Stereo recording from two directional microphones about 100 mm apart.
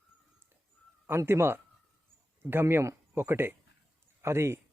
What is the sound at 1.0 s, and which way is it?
A man's voice, 25° right (ahead or behind).